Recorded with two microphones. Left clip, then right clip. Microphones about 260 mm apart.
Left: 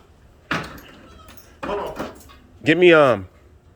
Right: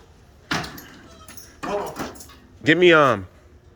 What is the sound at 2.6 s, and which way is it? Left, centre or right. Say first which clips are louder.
Speech: left 1 dB; centre.